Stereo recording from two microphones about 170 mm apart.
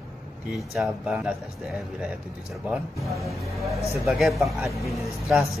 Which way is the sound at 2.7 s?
Centre (ahead or behind).